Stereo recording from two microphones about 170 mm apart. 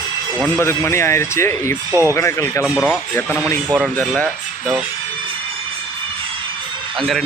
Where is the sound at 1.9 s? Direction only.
15° right (ahead or behind).